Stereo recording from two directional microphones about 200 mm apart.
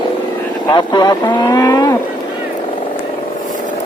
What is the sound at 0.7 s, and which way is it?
Cattle, 20° left (ahead or behind).